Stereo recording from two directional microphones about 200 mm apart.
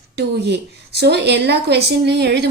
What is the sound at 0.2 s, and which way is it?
A woman's voice, 60° right (ahead or behind).